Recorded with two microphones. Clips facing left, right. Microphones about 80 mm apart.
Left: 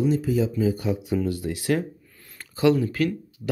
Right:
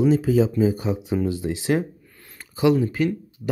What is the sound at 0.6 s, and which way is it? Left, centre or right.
Speech, right.